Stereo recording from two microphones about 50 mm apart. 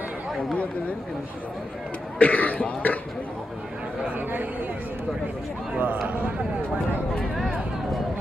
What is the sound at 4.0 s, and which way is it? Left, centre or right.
Speech, right.